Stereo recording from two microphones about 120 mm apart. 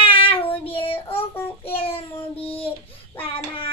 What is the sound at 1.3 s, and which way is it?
Child singing, 15° left (ahead or behind).